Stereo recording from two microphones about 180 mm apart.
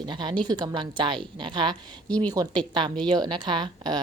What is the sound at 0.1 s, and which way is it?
Speech, 25° right (ahead or behind).